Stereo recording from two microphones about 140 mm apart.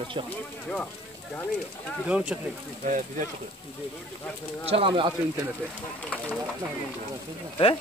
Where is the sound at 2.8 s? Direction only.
65° right (ahead or behind).